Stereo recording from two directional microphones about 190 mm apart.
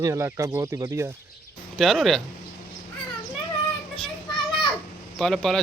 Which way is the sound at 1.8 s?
Centre (ahead or behind).